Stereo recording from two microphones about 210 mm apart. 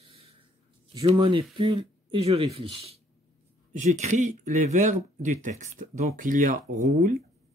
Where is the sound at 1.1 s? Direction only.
25° right (ahead or behind); by 7.1 s 45° right (ahead or behind).